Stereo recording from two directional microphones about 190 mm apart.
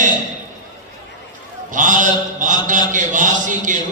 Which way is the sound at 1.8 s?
40° right (ahead or behind).